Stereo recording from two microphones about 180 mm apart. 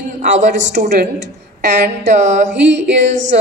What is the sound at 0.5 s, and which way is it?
Speech, 90° right.